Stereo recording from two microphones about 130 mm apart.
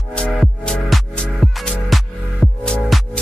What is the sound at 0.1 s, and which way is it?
Music, 5° left (ahead or behind).